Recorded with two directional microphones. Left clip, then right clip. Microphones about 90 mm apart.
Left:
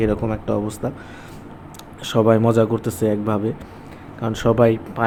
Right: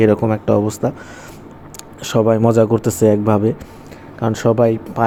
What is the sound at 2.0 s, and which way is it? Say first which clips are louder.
Speech: right 2 dB; 35° right (ahead or behind).